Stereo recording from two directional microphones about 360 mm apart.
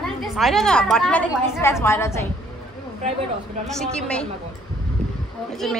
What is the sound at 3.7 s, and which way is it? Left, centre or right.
Speech, centre.